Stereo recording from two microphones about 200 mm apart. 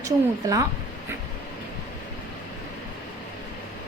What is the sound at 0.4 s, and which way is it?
Speech, 15° right (ahead or behind).